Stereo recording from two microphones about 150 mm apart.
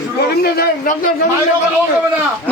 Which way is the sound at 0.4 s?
90° left.